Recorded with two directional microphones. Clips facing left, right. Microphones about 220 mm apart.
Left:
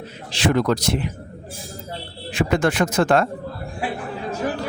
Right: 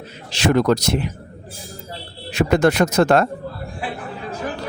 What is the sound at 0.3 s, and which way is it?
Speech, 40° right (ahead or behind).